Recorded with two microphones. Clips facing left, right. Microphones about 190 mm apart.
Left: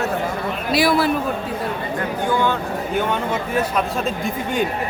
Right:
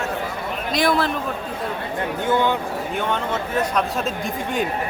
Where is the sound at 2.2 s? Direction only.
20° right (ahead or behind).